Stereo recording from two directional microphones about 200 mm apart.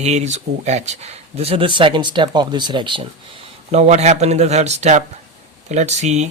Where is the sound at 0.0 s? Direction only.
35° right (ahead or behind).